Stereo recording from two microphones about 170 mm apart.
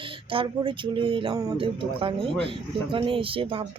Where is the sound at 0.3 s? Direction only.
30° right (ahead or behind).